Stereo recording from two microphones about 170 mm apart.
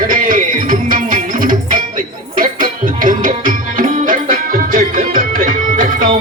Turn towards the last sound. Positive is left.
turn(degrees=-55)  # may be behind; listen again after turning